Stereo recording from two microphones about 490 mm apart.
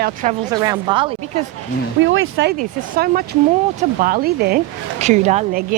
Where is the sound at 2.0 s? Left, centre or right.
Right.